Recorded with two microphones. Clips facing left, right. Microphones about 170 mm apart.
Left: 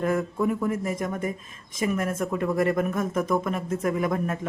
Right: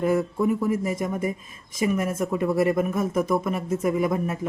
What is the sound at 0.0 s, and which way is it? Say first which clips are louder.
Speech: right 2 dB; 10° right (ahead or behind).